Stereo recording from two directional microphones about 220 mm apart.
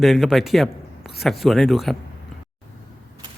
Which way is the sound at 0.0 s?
Centre (ahead or behind).